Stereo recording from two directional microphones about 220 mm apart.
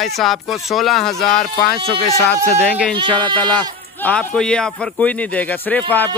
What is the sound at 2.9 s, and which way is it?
Speech, 20° right (ahead or behind).